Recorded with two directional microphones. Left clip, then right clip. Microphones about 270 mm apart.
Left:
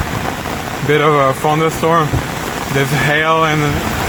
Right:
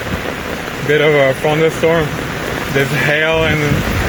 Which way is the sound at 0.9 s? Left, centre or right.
Left.